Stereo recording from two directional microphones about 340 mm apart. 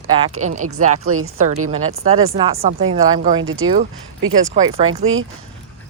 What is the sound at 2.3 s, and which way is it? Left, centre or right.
Speech, centre.